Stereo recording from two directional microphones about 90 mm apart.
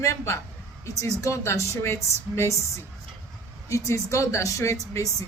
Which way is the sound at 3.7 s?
35° left (ahead or behind).